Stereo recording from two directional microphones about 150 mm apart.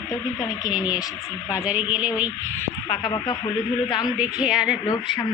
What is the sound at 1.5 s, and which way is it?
Speech, 10° right (ahead or behind).